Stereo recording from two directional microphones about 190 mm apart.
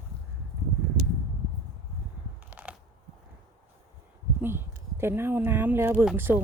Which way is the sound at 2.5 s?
10° right (ahead or behind).